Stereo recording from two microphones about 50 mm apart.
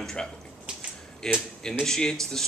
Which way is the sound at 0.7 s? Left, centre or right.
Centre.